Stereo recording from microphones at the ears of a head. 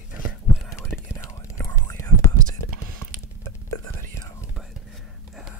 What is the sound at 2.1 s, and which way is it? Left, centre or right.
Whispering, right.